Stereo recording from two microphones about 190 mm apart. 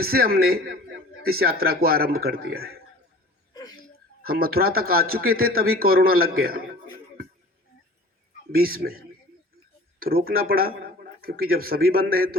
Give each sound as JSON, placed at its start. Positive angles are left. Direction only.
{"t": 0.0, "sound": "a man's voice", "side_deg": -55}
{"t": 3.5, "sound": "a sound", "side_deg": 20}
{"t": 4.2, "sound": "a man's voice", "side_deg": -50}
{"t": 8.5, "sound": "a man's voice", "side_deg": -50}